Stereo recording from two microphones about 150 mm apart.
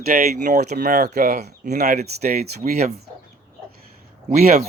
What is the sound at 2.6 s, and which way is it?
Speech, 60° right (ahead or behind).